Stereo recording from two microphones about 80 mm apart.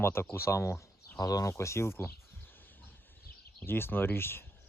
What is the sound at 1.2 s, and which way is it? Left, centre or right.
Speech, left.